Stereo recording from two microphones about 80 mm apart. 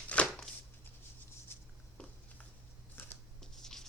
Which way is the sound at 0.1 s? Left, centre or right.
Centre.